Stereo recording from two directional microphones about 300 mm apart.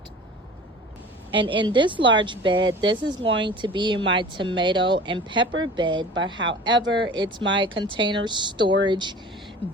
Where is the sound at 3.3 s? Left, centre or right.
Right.